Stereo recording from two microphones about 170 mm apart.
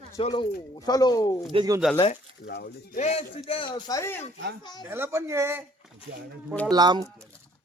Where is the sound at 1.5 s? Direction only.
25° right (ahead or behind).